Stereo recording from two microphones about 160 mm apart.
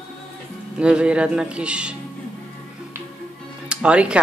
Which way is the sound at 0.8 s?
5° right (ahead or behind).